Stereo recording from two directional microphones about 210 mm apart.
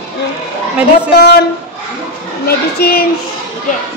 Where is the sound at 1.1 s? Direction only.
50° left (ahead or behind).